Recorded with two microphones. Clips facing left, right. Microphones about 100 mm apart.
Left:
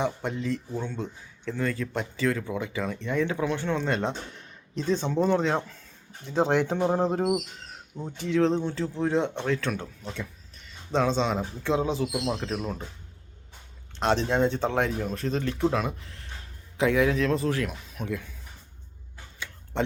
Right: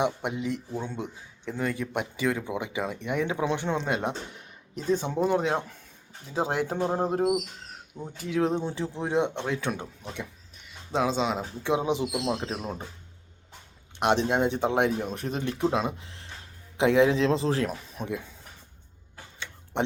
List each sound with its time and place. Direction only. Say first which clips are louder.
0.0 s speech: right 1 dB; 15° right (ahead or behind)
14.0 s a man's voice: even; 15° right (ahead or behind); by 18.1 s 30° right (ahead or behind)
18.1 s speech: left 1 dB; 20° right (ahead or behind)
19.7 s speech: even; 20° right (ahead or behind)